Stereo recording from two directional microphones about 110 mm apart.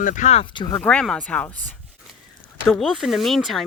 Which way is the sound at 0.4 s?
45° left (ahead or behind).